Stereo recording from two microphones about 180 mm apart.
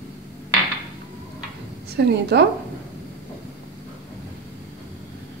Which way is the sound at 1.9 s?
70° right (ahead or behind).